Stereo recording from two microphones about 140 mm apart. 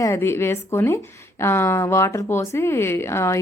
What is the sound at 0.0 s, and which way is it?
A woman's voice, 20° left (ahead or behind).